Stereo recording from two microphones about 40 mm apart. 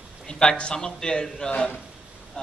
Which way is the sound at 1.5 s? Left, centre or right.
Left.